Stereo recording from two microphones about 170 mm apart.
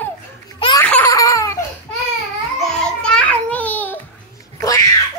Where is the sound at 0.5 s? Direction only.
30° left (ahead or behind).